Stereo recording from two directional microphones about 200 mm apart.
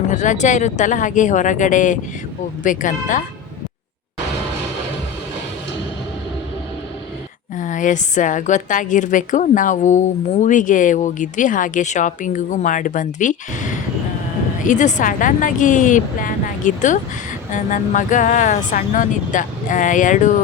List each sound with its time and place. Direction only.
0.1 s a woman's voice: 35° left (ahead or behind)
7.5 s a woman's voice: 40° left (ahead or behind)